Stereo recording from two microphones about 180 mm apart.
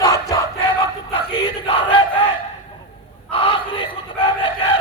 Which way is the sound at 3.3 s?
30° left (ahead or behind).